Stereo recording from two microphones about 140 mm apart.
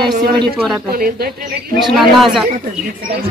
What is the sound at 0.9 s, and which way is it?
Speech, 90° right.